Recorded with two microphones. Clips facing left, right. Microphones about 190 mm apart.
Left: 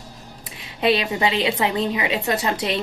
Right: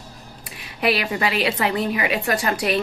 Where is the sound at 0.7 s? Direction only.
20° left (ahead or behind).